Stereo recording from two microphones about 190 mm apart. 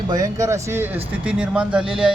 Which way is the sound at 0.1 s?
20° right (ahead or behind).